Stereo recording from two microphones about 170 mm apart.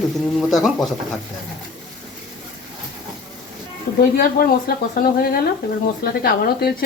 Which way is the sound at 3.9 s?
55° left (ahead or behind).